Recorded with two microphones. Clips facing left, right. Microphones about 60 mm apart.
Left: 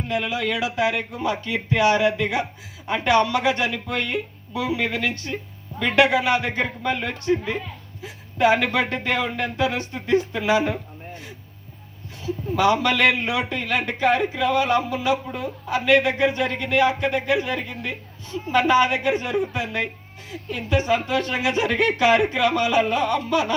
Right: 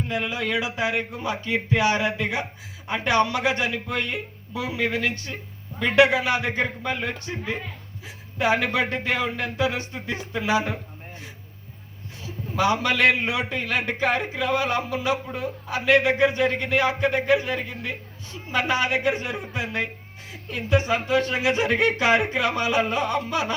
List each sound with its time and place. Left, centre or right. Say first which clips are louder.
0.1 s a man's voice: left 3 dB; right
12.5 s a man's voice: left 2 dB; centre